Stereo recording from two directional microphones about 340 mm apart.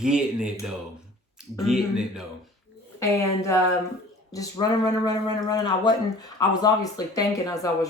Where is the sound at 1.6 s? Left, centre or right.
Centre.